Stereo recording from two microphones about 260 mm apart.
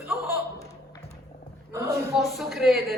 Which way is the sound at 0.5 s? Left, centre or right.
Centre.